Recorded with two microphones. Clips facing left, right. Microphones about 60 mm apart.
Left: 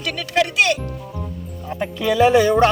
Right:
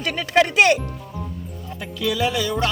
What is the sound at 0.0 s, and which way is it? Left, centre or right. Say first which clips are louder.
Speech: right 2 dB; right.